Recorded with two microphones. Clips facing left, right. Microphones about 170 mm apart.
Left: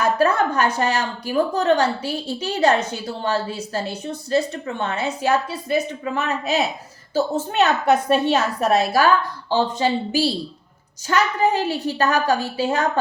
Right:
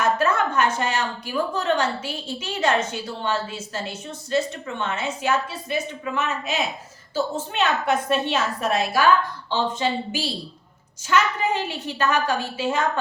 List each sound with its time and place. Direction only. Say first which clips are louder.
0.0 s a woman's voice: left 3 dB; 35° left (ahead or behind)
3.8 s a woman's voice: left 5 dB; 35° left (ahead or behind)